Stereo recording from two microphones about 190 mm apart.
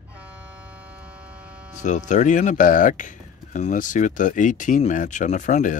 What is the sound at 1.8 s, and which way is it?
Speech, 40° left (ahead or behind).